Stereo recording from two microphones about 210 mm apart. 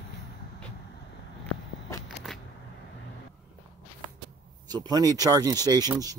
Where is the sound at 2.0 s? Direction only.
Centre (ahead or behind).